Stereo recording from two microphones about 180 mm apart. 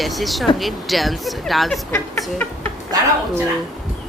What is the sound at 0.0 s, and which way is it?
Speech, centre (ahead or behind).